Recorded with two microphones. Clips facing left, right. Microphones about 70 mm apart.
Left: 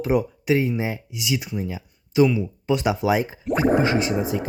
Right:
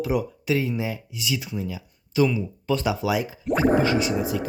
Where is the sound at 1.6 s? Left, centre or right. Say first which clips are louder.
Left 2 dB; left.